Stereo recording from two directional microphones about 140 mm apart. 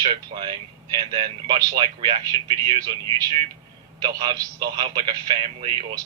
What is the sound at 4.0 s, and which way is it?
A man's voice, 30° right (ahead or behind).